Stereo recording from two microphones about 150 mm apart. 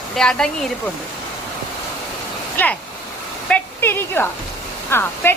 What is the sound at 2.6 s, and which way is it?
A woman's voice, 10° left (ahead or behind).